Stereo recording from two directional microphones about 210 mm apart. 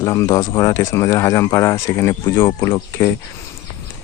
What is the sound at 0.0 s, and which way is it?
Speech, 15° left (ahead or behind).